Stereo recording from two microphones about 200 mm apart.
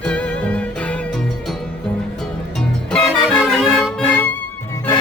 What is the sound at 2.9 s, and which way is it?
Music, centre (ahead or behind).